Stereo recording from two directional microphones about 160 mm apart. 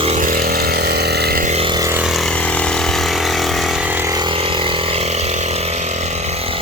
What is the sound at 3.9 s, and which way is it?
Vehicle, 20° right (ahead or behind).